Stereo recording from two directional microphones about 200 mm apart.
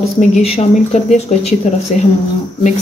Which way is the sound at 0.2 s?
35° left (ahead or behind).